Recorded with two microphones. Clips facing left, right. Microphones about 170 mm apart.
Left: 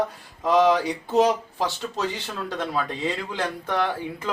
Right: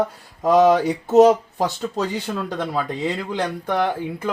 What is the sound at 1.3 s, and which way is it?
Speech, 15° right (ahead or behind).